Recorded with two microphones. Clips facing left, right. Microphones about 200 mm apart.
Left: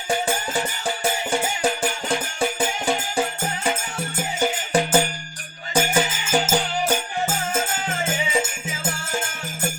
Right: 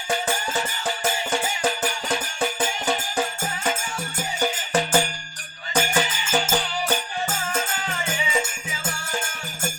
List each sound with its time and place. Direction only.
0.1 s music: 15° left (ahead or behind)